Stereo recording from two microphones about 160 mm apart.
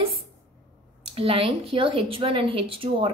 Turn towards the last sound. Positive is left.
turn(degrees=-35)  # may be behind; listen again after turning